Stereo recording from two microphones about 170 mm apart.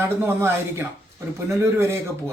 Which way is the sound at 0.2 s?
15° right (ahead or behind).